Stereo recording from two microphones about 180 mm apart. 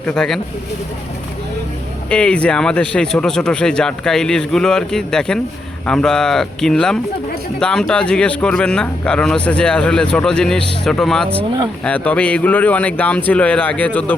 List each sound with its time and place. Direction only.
0.0 s speech: 5° left (ahead or behind)
2.0 s speech: 5° left (ahead or behind)
11.3 s speech: 25° right (ahead or behind)
11.8 s speech: 5° left (ahead or behind)